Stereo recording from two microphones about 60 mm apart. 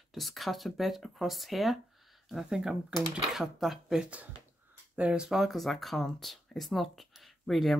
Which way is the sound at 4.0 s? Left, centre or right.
Right.